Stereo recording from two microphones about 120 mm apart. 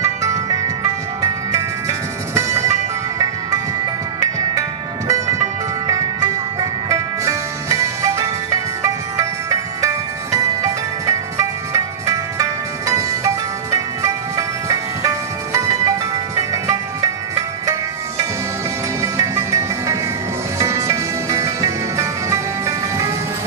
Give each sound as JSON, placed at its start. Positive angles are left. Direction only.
{"t": 0.0, "sound": "music", "side_deg": -25}
{"t": 4.6, "sound": "music", "side_deg": -30}